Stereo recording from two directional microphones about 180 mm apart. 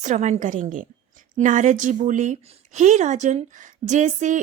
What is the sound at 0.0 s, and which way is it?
A woman's voice, 40° right (ahead or behind).